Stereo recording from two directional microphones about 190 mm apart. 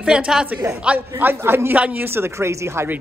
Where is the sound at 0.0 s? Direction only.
5° right (ahead or behind).